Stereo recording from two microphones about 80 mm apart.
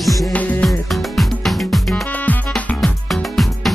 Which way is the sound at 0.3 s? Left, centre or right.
Centre.